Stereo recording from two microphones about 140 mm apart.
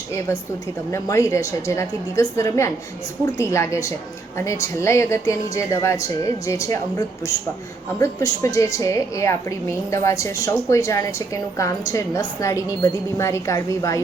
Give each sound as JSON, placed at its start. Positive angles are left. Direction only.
{"t": 0.9, "sound": "a woman's voice", "side_deg": 20}